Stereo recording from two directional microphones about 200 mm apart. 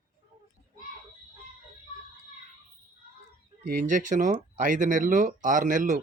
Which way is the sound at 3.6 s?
45° right (ahead or behind).